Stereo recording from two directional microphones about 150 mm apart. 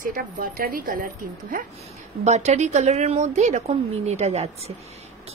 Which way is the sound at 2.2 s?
50° right (ahead or behind).